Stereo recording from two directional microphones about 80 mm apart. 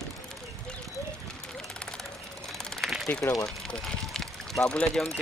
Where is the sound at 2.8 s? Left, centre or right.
Centre.